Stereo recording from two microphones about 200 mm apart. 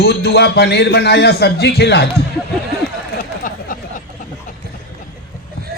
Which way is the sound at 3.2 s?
45° left (ahead or behind).